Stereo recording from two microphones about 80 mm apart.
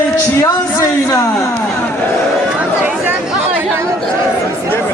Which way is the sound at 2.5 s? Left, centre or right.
Right.